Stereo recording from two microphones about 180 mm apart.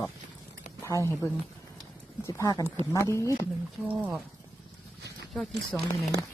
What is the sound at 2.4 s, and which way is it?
Speech, 15° left (ahead or behind).